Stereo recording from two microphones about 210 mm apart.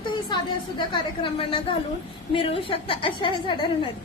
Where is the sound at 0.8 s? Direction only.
25° left (ahead or behind).